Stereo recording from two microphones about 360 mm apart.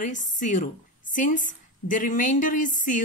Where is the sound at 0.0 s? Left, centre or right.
Left.